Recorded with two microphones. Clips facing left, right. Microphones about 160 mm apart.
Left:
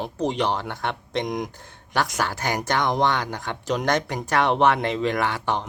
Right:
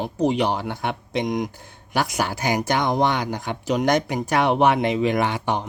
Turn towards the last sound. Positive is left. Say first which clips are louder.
# right 2 dB
turn(degrees=-15)  # may be behind; listen again after turning